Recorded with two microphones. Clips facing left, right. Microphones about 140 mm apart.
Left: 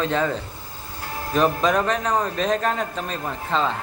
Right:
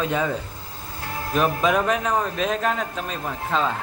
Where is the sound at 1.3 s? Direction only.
5° right (ahead or behind).